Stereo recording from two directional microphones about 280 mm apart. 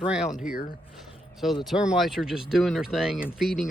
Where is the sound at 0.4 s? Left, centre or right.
Left.